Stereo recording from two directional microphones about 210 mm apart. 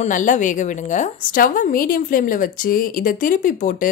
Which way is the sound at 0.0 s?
35° left (ahead or behind).